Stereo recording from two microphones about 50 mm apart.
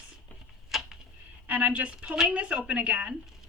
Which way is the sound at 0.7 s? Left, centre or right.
Centre.